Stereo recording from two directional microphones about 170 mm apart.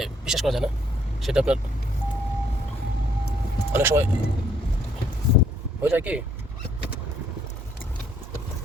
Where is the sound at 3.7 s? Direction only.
15° right (ahead or behind).